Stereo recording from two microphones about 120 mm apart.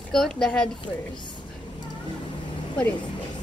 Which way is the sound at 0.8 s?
40° left (ahead or behind).